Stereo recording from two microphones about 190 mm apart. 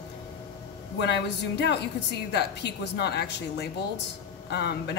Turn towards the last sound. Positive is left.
turn(degrees=60)  # may be behind; listen again after turning